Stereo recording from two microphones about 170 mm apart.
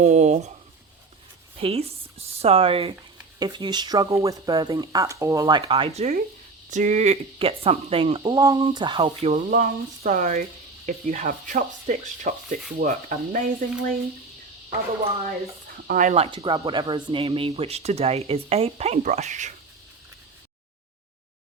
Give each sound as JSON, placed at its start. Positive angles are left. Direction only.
{"t": 0.0, "sound": "speech", "side_deg": -40}
{"t": 1.5, "sound": "speech", "side_deg": -35}
{"t": 8.4, "sound": "speech", "side_deg": -20}
{"t": 9.5, "sound": "speech", "side_deg": -60}
{"t": 15.9, "sound": "speech", "side_deg": -50}
{"t": 16.1, "sound": "speech", "side_deg": -30}